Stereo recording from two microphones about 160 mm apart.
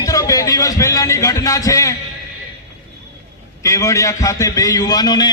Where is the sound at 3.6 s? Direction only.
20° left (ahead or behind).